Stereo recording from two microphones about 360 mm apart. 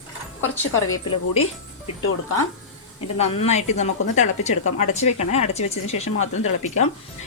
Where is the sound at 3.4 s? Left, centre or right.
Centre.